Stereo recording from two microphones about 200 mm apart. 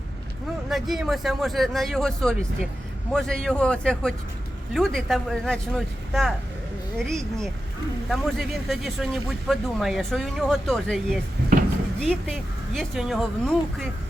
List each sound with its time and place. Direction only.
0.7 s speech: centre (ahead or behind)